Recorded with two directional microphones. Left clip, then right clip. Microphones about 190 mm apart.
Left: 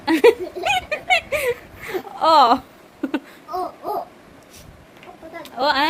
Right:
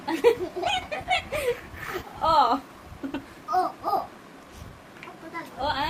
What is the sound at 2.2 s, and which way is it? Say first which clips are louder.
Speech: left 7 dB; 50° left (ahead or behind).